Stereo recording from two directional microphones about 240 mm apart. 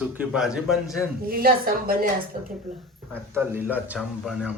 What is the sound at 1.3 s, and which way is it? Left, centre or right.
Speech, right.